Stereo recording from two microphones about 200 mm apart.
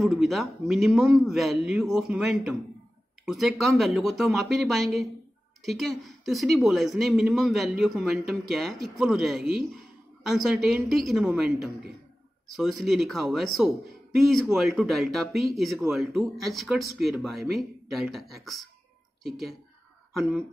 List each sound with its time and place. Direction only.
0.0 s speech: centre (ahead or behind)
12.5 s speech: centre (ahead or behind)